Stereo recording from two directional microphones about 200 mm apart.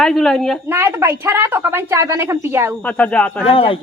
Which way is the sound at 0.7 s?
10° right (ahead or behind).